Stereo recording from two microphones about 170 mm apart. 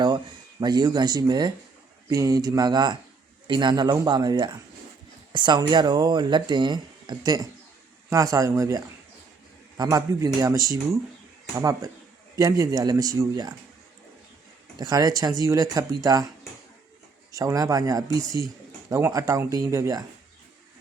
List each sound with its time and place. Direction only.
0.6 s speech: 25° right (ahead or behind)
14.8 s speech: 20° right (ahead or behind)
17.3 s speech: 20° right (ahead or behind)